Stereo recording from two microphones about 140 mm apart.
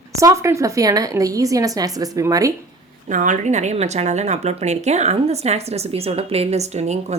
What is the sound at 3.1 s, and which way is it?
Speech, 65° right (ahead or behind).